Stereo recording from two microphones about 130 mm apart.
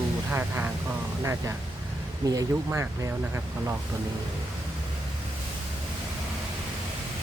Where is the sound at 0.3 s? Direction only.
15° right (ahead or behind).